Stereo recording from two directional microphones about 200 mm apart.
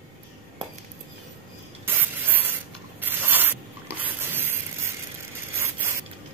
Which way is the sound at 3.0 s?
10° right (ahead or behind).